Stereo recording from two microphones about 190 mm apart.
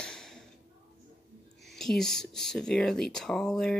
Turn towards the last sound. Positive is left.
turn(degrees=5)  # may be behind; listen again after turning